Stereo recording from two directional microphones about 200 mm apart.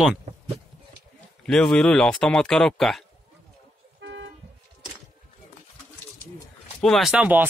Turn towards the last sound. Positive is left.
turn(degrees=-10)  # may be behind; listen again after turning